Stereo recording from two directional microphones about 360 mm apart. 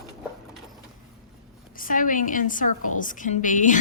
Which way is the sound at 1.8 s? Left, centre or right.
Left.